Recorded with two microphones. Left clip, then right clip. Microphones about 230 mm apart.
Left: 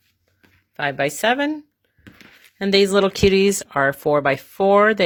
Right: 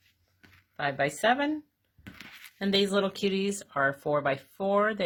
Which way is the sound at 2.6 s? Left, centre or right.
Left.